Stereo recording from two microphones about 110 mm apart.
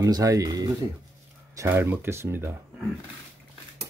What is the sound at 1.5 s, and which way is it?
Speech, 20° right (ahead or behind).